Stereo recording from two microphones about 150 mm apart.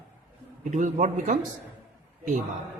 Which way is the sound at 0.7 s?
55° right (ahead or behind).